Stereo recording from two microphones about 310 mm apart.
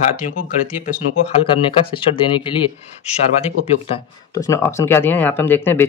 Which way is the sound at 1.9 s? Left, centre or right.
Centre.